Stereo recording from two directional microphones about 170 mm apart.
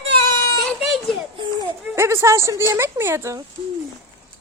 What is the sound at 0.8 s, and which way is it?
Children playing, centre (ahead or behind).